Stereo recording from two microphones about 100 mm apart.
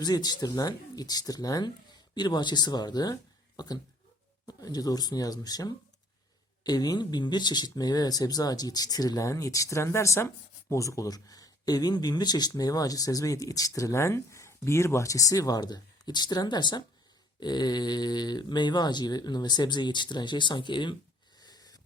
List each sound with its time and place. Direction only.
0.0 s speech: 40° left (ahead or behind)
21.4 s wheeze: 40° left (ahead or behind)